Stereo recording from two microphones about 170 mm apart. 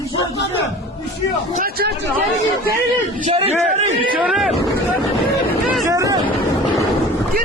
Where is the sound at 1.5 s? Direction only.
60° right (ahead or behind).